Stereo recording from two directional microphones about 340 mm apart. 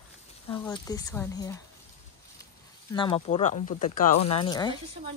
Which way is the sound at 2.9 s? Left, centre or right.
Centre.